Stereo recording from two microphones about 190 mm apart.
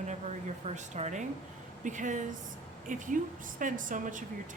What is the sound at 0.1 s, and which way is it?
A woman's voice, 35° right (ahead or behind).